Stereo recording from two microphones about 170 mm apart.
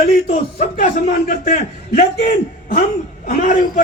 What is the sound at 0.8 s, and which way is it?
A man's voice, 50° left (ahead or behind).